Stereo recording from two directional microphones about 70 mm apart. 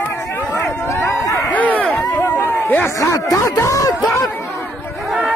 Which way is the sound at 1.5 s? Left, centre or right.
Left.